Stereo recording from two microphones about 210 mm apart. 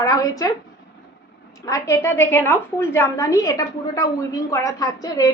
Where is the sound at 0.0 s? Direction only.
15° left (ahead or behind).